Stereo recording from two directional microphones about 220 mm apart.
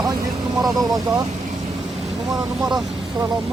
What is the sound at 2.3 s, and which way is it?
Speech, centre (ahead or behind).